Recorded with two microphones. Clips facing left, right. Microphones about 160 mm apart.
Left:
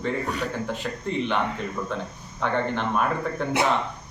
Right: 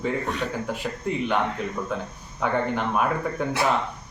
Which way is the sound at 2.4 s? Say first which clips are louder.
Right 1 dB; 5° right (ahead or behind).